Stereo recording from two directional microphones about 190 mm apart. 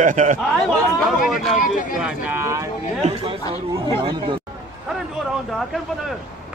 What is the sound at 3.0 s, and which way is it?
A man's voice, 35° right (ahead or behind).